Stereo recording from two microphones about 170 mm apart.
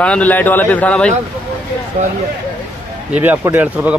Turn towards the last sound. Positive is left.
turn(degrees=-10)  # may be behind; listen again after turning